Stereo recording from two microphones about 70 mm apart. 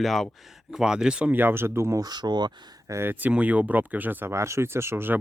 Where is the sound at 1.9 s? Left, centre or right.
Right.